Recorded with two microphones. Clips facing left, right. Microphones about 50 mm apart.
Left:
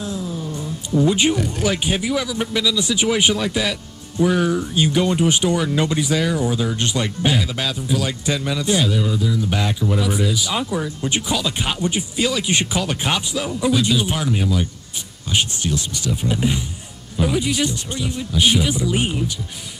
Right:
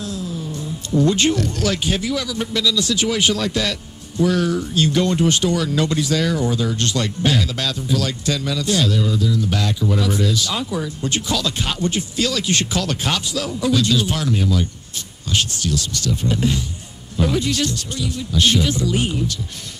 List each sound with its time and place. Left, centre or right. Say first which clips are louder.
0.0 s music: left 1 dB; left
0.9 s speech: even; centre